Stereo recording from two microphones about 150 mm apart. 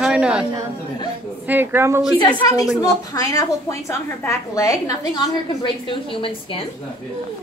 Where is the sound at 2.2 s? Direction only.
25° left (ahead or behind).